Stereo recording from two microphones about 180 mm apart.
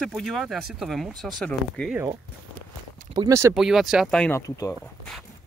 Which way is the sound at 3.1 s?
20° right (ahead or behind).